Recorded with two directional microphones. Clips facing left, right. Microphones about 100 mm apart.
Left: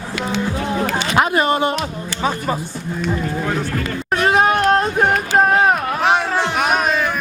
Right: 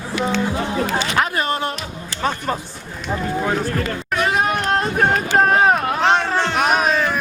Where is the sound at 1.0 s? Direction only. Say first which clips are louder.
Left 4 dB; 20° left (ahead or behind).